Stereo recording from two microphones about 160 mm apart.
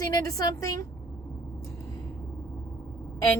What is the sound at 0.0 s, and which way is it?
Speech, 20° left (ahead or behind).